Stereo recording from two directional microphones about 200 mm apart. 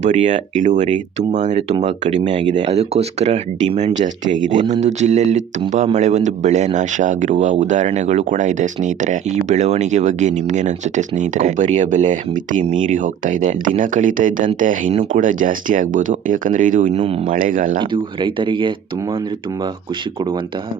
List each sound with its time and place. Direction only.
0.0 s speech: 35° right (ahead or behind)
17.7 s speech: 25° right (ahead or behind)